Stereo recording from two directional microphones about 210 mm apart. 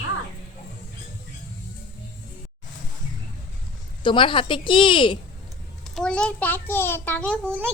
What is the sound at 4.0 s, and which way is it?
A woman's voice, 25° left (ahead or behind).